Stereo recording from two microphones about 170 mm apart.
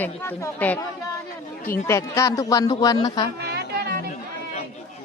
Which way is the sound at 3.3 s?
70° right (ahead or behind).